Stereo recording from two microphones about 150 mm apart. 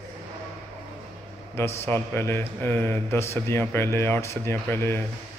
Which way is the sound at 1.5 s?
15° left (ahead or behind).